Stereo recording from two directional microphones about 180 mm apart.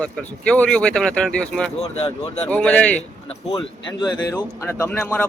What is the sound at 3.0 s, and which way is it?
Speech, 35° left (ahead or behind).